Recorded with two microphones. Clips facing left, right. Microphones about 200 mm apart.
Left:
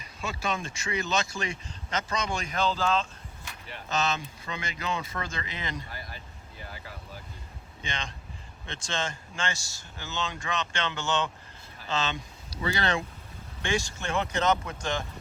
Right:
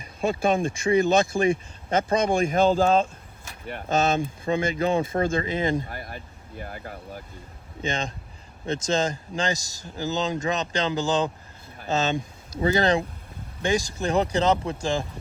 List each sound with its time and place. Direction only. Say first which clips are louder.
0.2 s speech: right 10 dB; 55° right (ahead or behind)
7.8 s speech: right 9 dB; 45° right (ahead or behind)
11.8 s speech: right 7 dB; 45° right (ahead or behind)